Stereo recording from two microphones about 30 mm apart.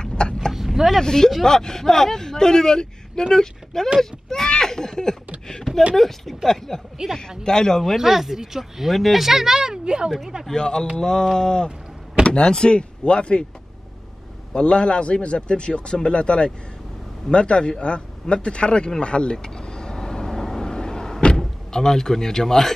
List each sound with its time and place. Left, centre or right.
0.0 s vehicle: left
0.5 s vehicle: centre
1.0 s speech: centre
7.0 s speech: centre
7.4 s speech: left
8.0 s speech: centre
8.9 s speech: centre
9.2 s speech: centre
9.6 s speech: right
10.0 s speech: centre
10.5 s speech: left
14.5 s speech: left
19.3 s vehicle: left
21.4 s speech: centre